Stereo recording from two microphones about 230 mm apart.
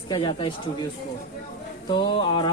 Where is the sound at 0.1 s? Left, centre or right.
Left.